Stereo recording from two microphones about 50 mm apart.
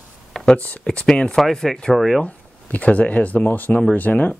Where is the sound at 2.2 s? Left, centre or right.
Left.